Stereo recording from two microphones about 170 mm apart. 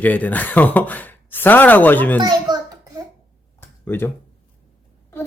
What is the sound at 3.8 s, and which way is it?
Speech, 10° left (ahead or behind).